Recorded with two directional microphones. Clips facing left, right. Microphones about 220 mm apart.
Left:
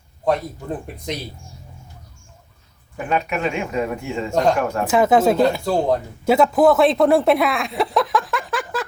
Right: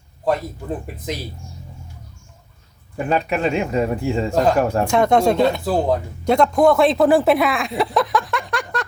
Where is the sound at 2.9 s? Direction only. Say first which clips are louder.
Right 2 dB; 35° right (ahead or behind).